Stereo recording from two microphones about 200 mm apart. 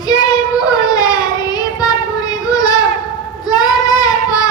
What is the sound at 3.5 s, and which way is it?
Child singing, 20° left (ahead or behind).